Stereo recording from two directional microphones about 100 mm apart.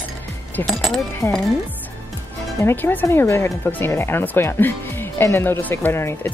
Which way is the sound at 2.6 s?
20° left (ahead or behind).